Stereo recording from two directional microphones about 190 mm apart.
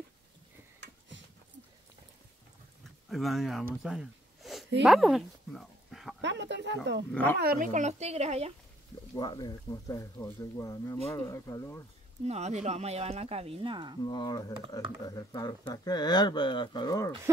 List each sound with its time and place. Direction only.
3.1 s speech: centre (ahead or behind)
3.6 s a sound: 5° right (ahead or behind)
4.8 s speech: centre (ahead or behind)
6.2 s speech: 65° right (ahead or behind)
7.1 s speech: 5° left (ahead or behind)
7.3 s speech: 50° right (ahead or behind); by 8.5 s 35° right (ahead or behind)
9.1 s speech: 20° left (ahead or behind)
12.3 s speech: 35° right (ahead or behind)
14.0 s speech: 20° left (ahead or behind)